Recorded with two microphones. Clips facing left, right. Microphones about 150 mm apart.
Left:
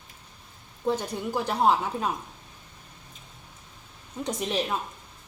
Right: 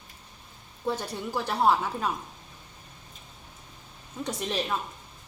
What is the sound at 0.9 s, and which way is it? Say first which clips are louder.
A woman's voice: left 3 dB; 15° left (ahead or behind).